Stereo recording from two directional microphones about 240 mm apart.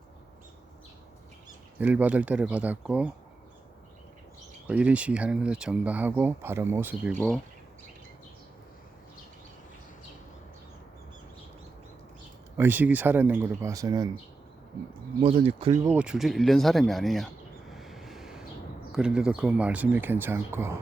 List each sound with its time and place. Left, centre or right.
1.8 s speech: centre
4.7 s speech: centre
12.5 s speech: centre
15.2 s speech: right
15.9 s speech: centre
17.7 s vehicle: centre
18.9 s speech: centre